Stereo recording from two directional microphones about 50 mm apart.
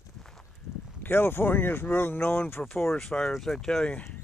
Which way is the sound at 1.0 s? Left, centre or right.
Left.